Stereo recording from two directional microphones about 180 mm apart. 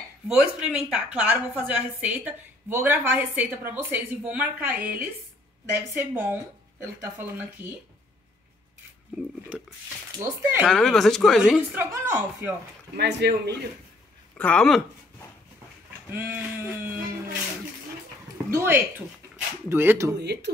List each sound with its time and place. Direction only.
0.3 s a woman's voice: 5° right (ahead or behind)
9.2 s a woman's voice: 5° right (ahead or behind)
10.7 s speech: centre (ahead or behind)
11.8 s a woman's voice: 15° right (ahead or behind)
12.9 s speech: 70° right (ahead or behind)
14.3 s speech: 5° left (ahead or behind)
16.1 s a woman's voice: 10° right (ahead or behind)
18.5 s a woman's voice: 15° right (ahead or behind)
20.2 s speech: 70° right (ahead or behind)